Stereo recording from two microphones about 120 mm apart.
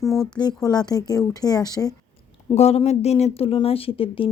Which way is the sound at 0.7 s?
35° left (ahead or behind).